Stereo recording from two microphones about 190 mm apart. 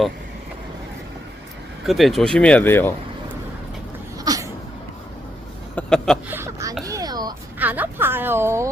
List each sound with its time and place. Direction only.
1.9 s speech: centre (ahead or behind)
4.2 s sneeze: 20° right (ahead or behind)
5.7 s a sound: 5° left (ahead or behind)
6.2 s speech: 10° right (ahead or behind)
6.8 s a sound: 20° right (ahead or behind)
7.6 s speech: 10° right (ahead or behind)